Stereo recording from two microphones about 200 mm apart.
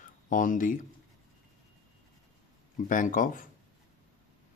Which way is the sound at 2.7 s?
40° left (ahead or behind).